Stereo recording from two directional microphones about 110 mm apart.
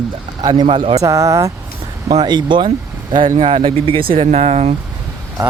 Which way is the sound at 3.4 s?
55° right (ahead or behind).